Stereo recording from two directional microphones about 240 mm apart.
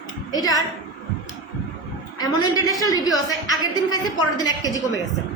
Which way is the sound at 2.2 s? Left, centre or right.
Centre.